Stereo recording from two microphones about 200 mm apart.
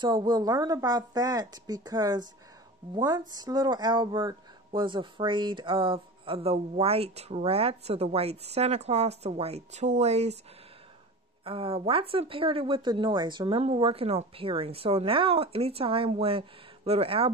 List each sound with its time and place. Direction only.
0.0 s speech: 20° right (ahead or behind)
11.4 s speech: 30° right (ahead or behind)